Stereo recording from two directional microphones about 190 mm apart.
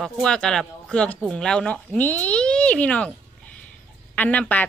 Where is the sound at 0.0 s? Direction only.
5° left (ahead or behind).